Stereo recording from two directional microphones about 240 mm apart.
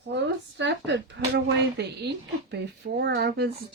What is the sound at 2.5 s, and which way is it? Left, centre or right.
Speech, right.